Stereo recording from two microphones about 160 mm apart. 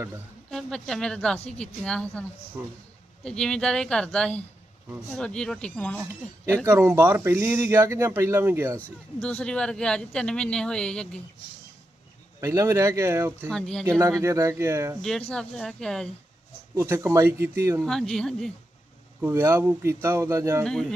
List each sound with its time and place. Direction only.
0.5 s speech: centre (ahead or behind)
3.2 s speech: 5° left (ahead or behind)
6.0 s speech: 15° right (ahead or behind)
9.2 s speech: 5° left (ahead or behind)
12.4 s speech: 20° right (ahead or behind)
13.5 s speech: 5° left (ahead or behind)
14.2 s speech: 20° right (ahead or behind)
15.3 s speech: 5° left (ahead or behind)
16.7 s speech: 15° right (ahead or behind)
17.8 s speech: 5° left (ahead or behind)
19.2 s speech: 15° right (ahead or behind)
20.7 s speech: 5° left (ahead or behind)